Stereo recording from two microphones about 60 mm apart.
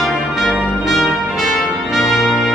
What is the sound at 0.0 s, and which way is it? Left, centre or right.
Music, centre.